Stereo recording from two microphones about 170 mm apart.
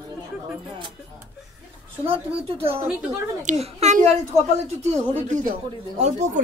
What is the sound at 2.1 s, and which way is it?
Speech, 35° right (ahead or behind).